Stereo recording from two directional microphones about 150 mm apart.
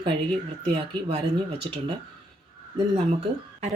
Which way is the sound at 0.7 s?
40° right (ahead or behind).